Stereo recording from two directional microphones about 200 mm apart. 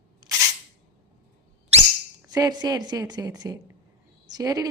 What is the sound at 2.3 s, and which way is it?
A woman's voice, 20° right (ahead or behind).